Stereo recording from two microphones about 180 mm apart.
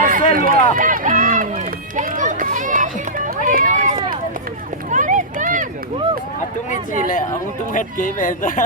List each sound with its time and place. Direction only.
0.0 s run: 50° right (ahead or behind)
7.7 s speech: 50° left (ahead or behind)